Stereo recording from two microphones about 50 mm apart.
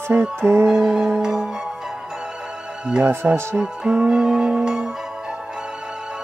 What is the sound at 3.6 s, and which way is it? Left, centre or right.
Music, centre.